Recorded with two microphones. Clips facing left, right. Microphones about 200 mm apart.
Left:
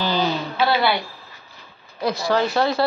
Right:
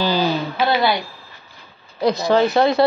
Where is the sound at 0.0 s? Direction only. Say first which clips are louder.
Right 3 dB; 10° right (ahead or behind).